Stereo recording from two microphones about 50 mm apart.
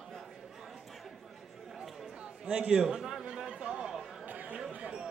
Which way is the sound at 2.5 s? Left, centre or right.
Centre.